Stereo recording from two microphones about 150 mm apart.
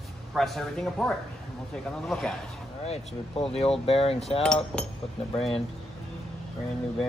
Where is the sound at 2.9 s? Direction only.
40° left (ahead or behind).